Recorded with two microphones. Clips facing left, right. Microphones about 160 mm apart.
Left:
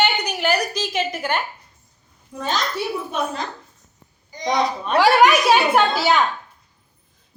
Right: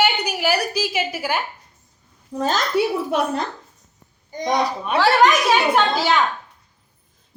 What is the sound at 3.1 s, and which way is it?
Speech, 65° right (ahead or behind).